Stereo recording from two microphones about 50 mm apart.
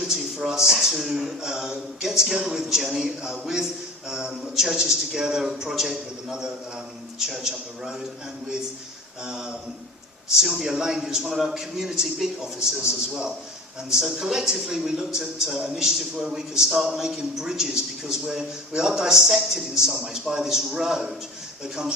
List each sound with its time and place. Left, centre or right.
0.1 s a man's voice: centre
9.2 s a man's voice: centre